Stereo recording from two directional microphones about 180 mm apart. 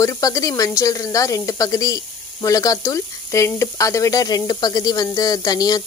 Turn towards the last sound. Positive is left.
turn(degrees=20)  # may be behind; listen again after turning